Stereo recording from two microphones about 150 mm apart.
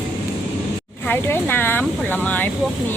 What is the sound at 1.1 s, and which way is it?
Speech, 15° left (ahead or behind).